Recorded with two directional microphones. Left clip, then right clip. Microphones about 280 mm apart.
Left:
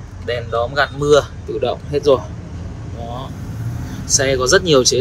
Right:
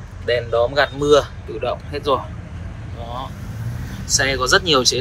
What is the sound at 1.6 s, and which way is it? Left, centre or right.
Speech, left.